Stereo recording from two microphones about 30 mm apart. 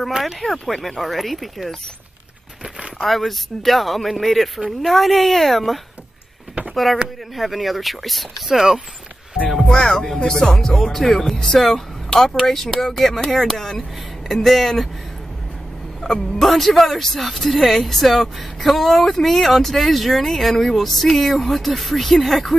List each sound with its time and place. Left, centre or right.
0.2 s speech: centre
3.0 s speech: centre
8.5 s speech: centre
9.7 s speech: left
10.5 s speech: centre
16.0 s a sound: centre
16.4 s speech: centre